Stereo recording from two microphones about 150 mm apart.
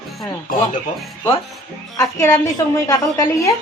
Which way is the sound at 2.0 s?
20° left (ahead or behind).